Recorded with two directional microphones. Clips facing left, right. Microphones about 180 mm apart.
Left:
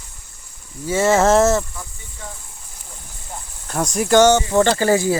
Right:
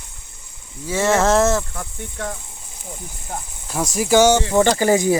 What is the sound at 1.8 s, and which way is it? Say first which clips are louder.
Speech: right 7 dB; 70° right (ahead or behind).